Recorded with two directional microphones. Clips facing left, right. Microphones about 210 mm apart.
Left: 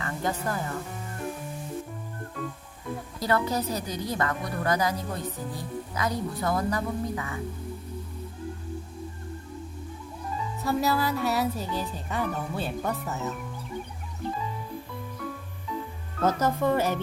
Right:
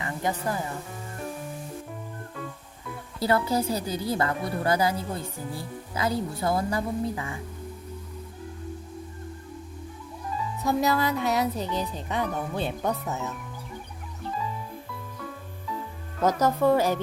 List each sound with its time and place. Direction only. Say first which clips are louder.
0.0 s speech: right 1 dB; 15° right (ahead or behind)
3.2 s speech: right 3 dB; 30° right (ahead or behind)
10.6 s music: right 2 dB; 15° right (ahead or behind)
10.8 s speech: even; 5° left (ahead or behind)
16.2 s speech: right 2 dB; 10° right (ahead or behind)